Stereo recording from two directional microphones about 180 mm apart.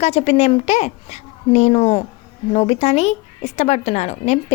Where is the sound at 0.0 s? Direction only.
35° left (ahead or behind).